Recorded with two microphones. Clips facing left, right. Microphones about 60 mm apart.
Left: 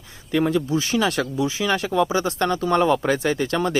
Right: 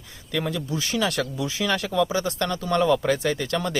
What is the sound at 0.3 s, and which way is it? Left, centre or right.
Speech, left.